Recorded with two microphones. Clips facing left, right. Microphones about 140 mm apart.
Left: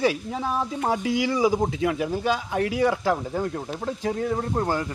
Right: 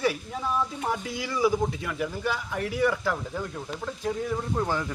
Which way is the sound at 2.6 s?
90° left.